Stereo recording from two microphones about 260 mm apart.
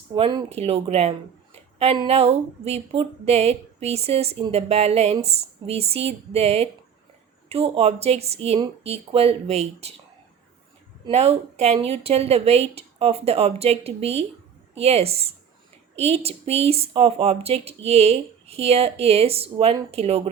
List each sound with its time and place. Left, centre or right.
0.1 s speech: centre
11.0 s speech: right